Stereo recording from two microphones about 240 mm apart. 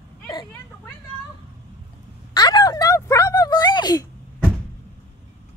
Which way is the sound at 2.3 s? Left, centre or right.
Centre.